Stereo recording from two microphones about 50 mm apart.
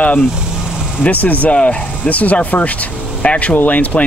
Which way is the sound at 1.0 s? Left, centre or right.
Left.